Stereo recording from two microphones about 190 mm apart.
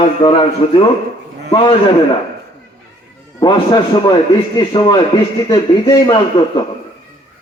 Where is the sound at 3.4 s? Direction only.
20° left (ahead or behind).